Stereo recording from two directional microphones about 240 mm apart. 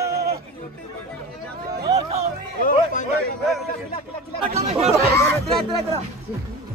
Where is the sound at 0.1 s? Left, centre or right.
Right.